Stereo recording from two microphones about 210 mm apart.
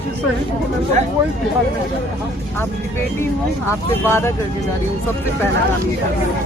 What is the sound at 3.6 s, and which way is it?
Speech, 10° left (ahead or behind).